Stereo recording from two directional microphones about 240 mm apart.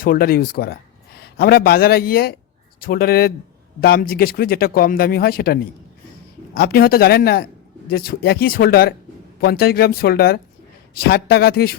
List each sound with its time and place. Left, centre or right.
0.0 s speech: left